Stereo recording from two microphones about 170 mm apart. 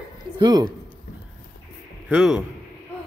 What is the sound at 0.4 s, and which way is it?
Speech, 25° right (ahead or behind).